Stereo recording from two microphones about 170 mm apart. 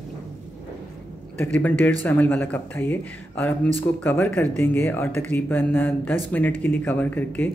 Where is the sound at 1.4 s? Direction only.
10° left (ahead or behind).